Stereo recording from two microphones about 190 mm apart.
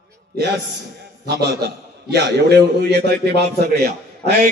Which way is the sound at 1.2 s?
60° right (ahead or behind).